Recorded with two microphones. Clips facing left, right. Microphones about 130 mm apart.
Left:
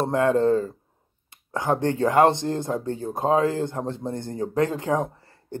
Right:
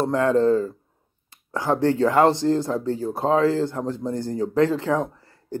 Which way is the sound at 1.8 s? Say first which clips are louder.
Right 1 dB; 20° left (ahead or behind).